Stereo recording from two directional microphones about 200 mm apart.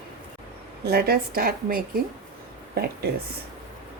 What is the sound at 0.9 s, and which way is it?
A woman's voice, 50° right (ahead or behind).